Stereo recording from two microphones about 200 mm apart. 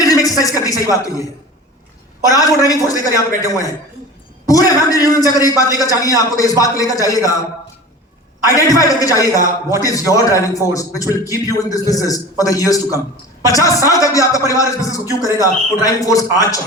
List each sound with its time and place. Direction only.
0.0 s a sound: 15° left (ahead or behind)
2.2 s a man's voice: 15° left (ahead or behind)
8.4 s a man's voice: 15° left (ahead or behind)